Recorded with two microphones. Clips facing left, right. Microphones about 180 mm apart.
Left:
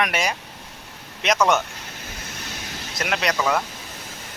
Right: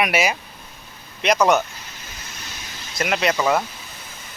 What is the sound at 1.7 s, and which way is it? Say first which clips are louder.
Vehicle: left 3 dB; 65° left (ahead or behind).